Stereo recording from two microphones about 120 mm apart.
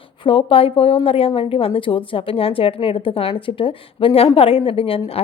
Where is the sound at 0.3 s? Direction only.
50° left (ahead or behind).